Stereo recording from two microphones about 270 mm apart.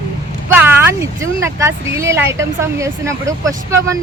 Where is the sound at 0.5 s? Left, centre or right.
Centre.